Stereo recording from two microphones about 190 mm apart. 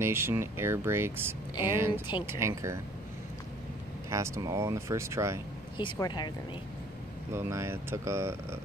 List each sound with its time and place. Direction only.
0.0 s speech: 10° right (ahead or behind)
4.1 s speech: 15° right (ahead or behind)
5.8 s speech: 25° left (ahead or behind)
7.3 s speech: 15° right (ahead or behind)